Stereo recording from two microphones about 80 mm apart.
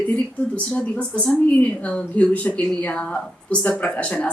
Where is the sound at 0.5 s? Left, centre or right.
Centre.